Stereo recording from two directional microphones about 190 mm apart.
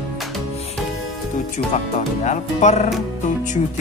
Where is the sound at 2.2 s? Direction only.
35° left (ahead or behind).